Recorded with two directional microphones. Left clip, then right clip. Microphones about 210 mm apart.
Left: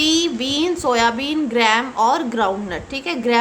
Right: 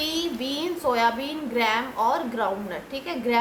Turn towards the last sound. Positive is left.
turn(degrees=50)  # may be behind; listen again after turning